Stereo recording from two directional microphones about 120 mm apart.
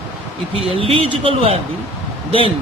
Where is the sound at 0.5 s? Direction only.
50° right (ahead or behind).